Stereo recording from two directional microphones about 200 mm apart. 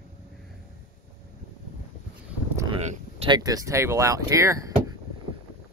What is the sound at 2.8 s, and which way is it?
Speech, 30° right (ahead or behind).